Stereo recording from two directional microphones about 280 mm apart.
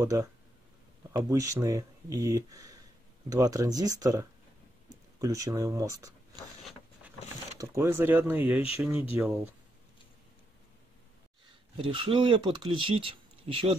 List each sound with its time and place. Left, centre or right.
0.0 s speech: centre
7.5 s speech: centre
11.9 s speech: centre